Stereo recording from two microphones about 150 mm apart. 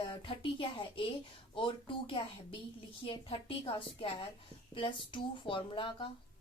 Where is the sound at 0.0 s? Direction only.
35° left (ahead or behind).